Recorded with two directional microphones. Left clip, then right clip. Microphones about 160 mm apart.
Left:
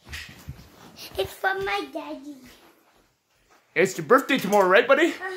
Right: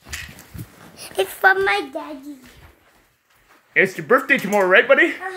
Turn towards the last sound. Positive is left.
turn(degrees=10)  # may be behind; listen again after turning